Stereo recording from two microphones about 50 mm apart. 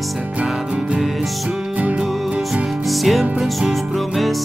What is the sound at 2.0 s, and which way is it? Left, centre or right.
Music, centre.